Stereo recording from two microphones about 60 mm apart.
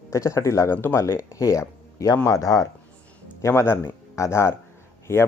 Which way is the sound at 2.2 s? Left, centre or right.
Left.